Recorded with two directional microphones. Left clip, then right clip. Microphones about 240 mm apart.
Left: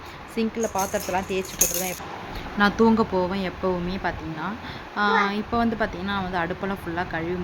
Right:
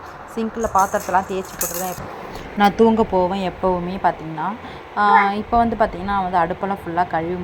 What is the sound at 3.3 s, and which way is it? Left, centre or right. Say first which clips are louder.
Speech: right 6 dB; centre.